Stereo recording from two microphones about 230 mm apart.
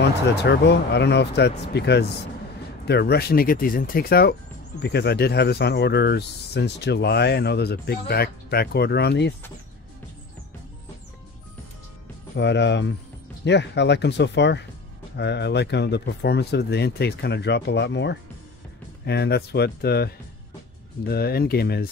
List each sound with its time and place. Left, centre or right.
0.0 s speech: left
12.4 s speech: left